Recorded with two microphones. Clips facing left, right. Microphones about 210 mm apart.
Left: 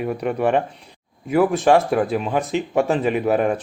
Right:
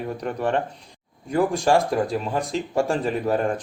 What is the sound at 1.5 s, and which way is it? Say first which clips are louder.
Speech: left 4 dB; 5° left (ahead or behind).